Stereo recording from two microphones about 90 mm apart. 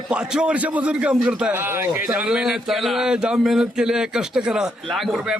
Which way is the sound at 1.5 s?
25° right (ahead or behind).